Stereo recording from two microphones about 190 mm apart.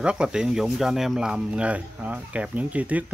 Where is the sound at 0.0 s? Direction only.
5° right (ahead or behind).